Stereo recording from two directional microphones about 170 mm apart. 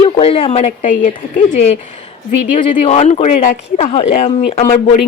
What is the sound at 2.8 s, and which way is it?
A woman's voice, 40° left (ahead or behind).